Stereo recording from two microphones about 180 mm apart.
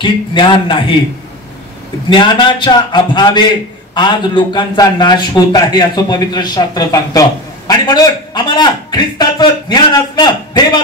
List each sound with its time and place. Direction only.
0.0 s a man's voice: 25° left (ahead or behind)
2.0 s a man's voice: 25° left (ahead or behind)